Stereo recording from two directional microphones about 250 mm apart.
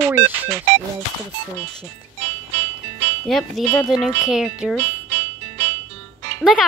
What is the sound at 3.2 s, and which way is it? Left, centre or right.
Speech, centre.